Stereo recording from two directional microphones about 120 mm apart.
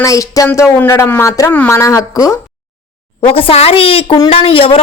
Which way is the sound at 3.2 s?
50° left (ahead or behind).